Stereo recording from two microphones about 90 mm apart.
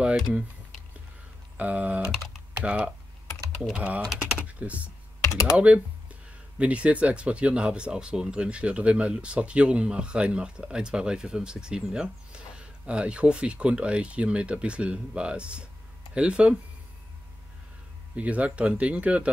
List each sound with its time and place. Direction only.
1.6 s speech: 15° right (ahead or behind)
5.2 s speech: 35° left (ahead or behind)
5.6 s speech: 15° right (ahead or behind)
18.1 s speech: 15° right (ahead or behind)